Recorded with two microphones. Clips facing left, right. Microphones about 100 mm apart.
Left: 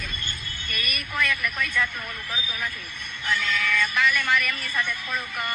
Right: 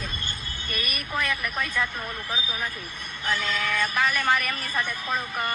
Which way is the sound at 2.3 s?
30° right (ahead or behind).